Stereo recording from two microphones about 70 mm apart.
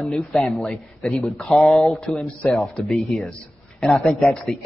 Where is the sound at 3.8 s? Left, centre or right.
Centre.